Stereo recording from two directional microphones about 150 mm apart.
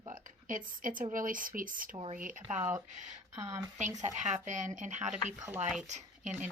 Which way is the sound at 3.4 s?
20° right (ahead or behind).